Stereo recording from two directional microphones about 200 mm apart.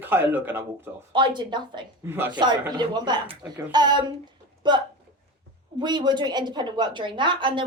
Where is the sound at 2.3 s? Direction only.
20° right (ahead or behind).